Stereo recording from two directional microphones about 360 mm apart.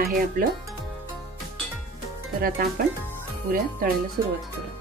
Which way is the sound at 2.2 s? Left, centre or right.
Right.